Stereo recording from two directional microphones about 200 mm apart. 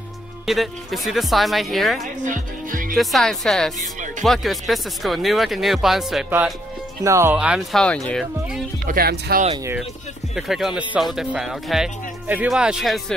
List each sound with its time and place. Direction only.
0.5 s speech: centre (ahead or behind)
2.2 s music: 40° right (ahead or behind)
3.0 s speech: centre (ahead or behind)
7.0 s speech: 15° right (ahead or behind)
8.8 s music: 50° right (ahead or behind)
10.3 s speech: centre (ahead or behind)